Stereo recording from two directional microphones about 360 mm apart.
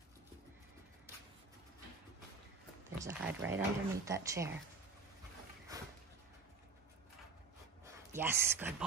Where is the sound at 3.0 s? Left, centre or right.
Centre.